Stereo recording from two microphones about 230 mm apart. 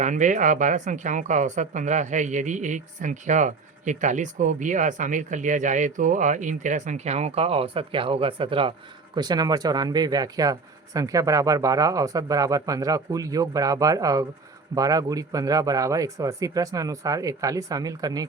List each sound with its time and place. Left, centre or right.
0.0 s a woman's voice: right; by 18.3 s centre